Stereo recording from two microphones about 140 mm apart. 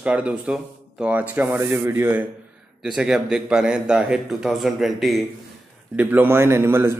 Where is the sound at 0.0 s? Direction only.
10° right (ahead or behind).